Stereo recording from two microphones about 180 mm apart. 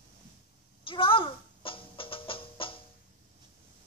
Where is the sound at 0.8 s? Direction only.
30° left (ahead or behind).